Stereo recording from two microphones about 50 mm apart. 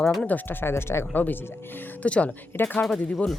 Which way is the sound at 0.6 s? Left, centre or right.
Left.